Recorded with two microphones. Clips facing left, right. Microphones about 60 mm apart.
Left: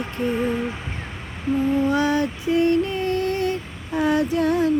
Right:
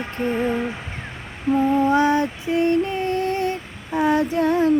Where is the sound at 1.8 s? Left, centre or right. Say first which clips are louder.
Right 3 dB; right.